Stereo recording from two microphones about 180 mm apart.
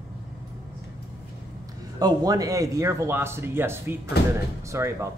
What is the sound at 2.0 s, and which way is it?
Speech, 20° right (ahead or behind).